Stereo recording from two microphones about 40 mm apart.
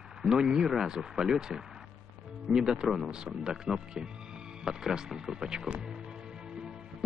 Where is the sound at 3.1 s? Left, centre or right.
Centre.